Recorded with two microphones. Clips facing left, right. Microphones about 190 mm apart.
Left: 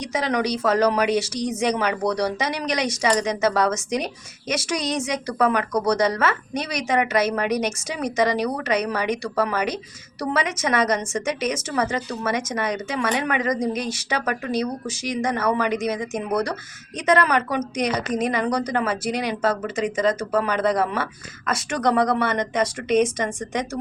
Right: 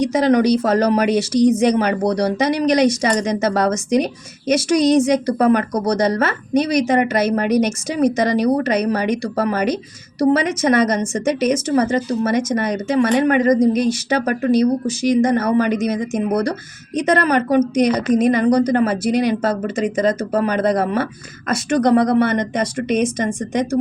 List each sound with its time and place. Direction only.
0.0 s speech: 40° right (ahead or behind)